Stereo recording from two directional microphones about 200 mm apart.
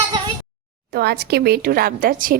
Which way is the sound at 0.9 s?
55° right (ahead or behind).